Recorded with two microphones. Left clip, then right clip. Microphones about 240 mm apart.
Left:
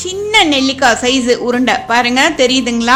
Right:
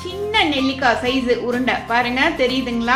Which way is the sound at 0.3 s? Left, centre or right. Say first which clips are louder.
Left 7 dB; left.